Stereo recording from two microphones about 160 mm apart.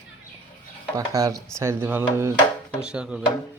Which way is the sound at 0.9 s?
20° right (ahead or behind).